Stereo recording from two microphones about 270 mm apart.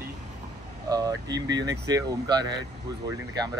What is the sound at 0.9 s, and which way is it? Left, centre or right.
Speech, centre.